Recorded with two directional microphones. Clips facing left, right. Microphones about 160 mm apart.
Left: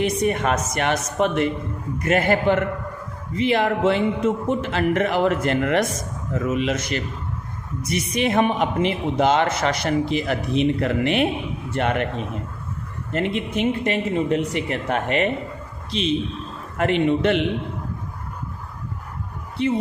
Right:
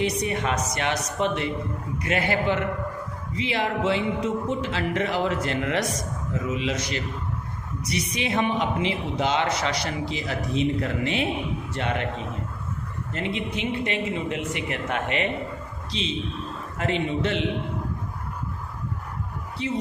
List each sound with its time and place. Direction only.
0.0 s a woman's voice: 50° left (ahead or behind)
13.1 s a woman's voice: 55° left (ahead or behind)
15.9 s a man's voice: 55° left (ahead or behind)
19.6 s a man's voice: 55° left (ahead or behind)